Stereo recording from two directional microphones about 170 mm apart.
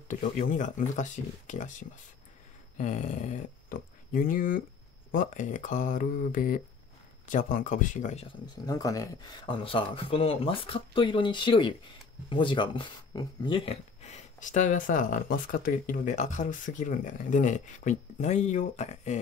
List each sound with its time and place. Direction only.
0.1 s speech: 50° left (ahead or behind)
8.6 s speech: 20° left (ahead or behind)
9.6 s speech: 30° left (ahead or behind)